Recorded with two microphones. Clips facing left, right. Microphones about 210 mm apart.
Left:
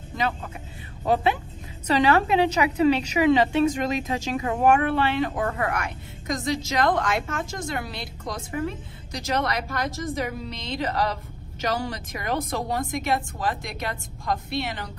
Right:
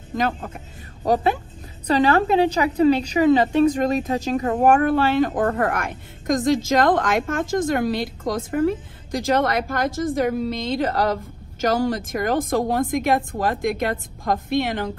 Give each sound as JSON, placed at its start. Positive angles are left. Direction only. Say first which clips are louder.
{"t": 0.1, "sound": "a man's voice", "louder": "right 4 dB", "side_deg": -50}